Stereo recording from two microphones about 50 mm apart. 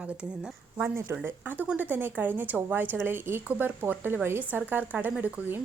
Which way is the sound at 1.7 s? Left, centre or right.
Right.